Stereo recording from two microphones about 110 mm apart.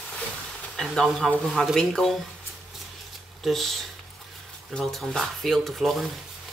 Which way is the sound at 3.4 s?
Centre (ahead or behind).